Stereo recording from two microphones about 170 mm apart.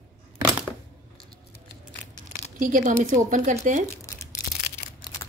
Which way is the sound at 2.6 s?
50° right (ahead or behind).